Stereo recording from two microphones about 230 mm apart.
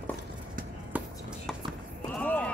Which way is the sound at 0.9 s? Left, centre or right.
Centre.